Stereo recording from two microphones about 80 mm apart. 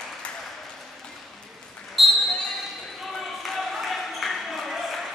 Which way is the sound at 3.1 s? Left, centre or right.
Centre.